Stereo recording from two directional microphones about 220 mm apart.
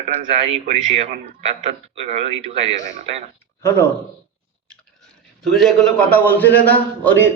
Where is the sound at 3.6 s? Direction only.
10° left (ahead or behind).